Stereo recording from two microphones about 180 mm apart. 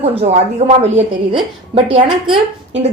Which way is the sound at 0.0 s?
35° right (ahead or behind).